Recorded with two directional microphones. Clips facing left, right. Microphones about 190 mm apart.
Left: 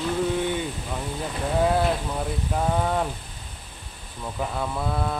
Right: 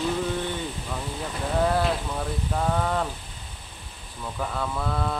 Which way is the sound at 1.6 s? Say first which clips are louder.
Left 2 dB; 10° left (ahead or behind).